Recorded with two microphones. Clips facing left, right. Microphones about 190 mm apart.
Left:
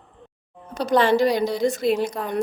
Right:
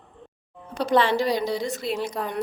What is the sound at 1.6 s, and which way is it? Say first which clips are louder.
Speech: left 8 dB; 50° left (ahead or behind).